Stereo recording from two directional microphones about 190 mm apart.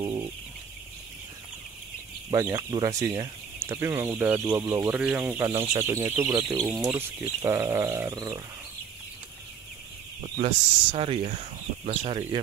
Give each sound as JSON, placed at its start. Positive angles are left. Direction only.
{"t": 0.0, "sound": "chicken", "side_deg": -25}
{"t": 2.3, "sound": "speech", "side_deg": -20}
{"t": 10.2, "sound": "speech", "side_deg": -30}